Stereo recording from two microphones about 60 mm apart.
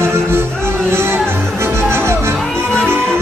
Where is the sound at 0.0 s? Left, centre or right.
Right.